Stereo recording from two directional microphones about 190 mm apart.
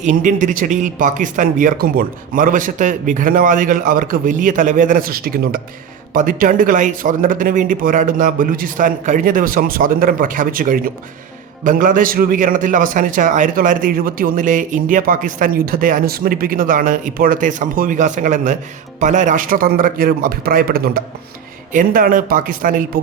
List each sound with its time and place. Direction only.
0.0 s a man's voice: 45° right (ahead or behind)